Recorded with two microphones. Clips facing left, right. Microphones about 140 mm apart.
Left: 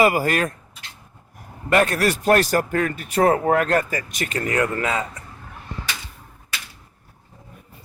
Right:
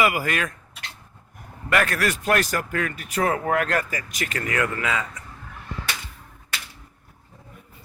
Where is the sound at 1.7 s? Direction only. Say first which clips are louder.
Left 4 dB; 25° left (ahead or behind).